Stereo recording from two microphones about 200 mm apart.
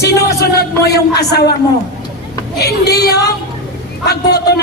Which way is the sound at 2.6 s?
55° left (ahead or behind).